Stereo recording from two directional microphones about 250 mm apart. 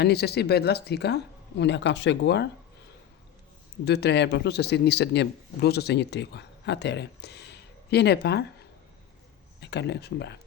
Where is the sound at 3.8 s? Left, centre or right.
Left.